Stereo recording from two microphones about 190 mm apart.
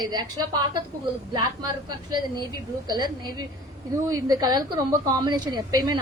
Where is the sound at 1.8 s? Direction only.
20° right (ahead or behind).